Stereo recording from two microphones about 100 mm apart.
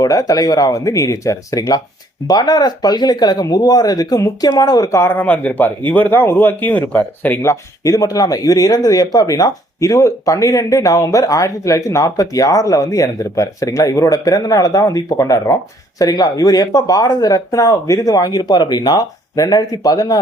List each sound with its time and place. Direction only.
0.0 s speech: 35° left (ahead or behind)
5.1 s speech: 15° left (ahead or behind); by 20.2 s 35° left (ahead or behind)